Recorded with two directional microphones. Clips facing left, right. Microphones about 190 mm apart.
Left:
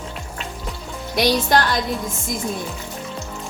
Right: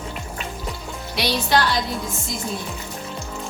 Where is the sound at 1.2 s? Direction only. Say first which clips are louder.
Left 3 dB; 45° left (ahead or behind).